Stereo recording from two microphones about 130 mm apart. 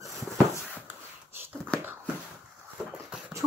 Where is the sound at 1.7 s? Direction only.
5° left (ahead or behind).